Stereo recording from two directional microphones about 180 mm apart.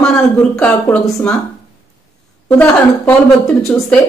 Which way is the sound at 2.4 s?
10° left (ahead or behind).